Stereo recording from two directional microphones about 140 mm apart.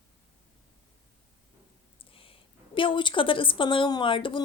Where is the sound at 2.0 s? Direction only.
40° left (ahead or behind).